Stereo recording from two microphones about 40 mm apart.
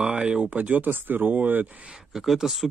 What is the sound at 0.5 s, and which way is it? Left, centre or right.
Speech, right.